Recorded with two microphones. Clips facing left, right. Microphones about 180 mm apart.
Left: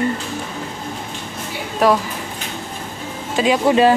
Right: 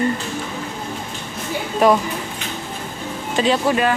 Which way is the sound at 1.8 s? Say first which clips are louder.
Right 1 dB; centre (ahead or behind).